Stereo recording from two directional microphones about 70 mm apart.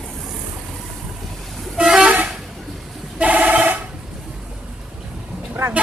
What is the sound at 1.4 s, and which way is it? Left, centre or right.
Vehicle, centre.